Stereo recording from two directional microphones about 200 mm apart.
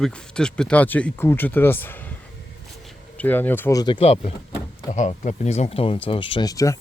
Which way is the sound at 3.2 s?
10° left (ahead or behind).